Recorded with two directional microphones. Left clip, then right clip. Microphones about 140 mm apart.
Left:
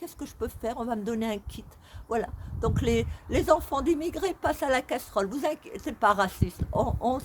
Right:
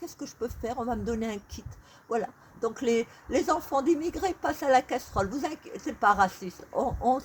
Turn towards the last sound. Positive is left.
turn(degrees=15)  # may be behind; listen again after turning